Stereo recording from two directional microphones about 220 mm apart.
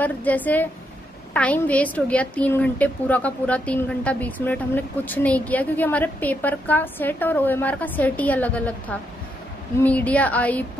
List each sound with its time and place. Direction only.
0.0 s a woman's voice: 5° left (ahead or behind)